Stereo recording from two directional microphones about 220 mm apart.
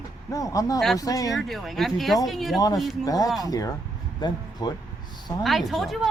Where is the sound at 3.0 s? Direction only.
15° left (ahead or behind).